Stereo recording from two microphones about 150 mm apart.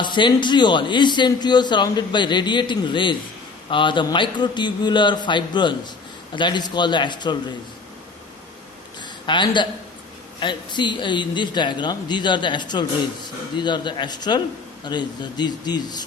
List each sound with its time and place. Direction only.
0.0 s a man's voice: 30° left (ahead or behind)
9.0 s a sound: 30° left (ahead or behind)
10.4 s a man's voice: 30° left (ahead or behind)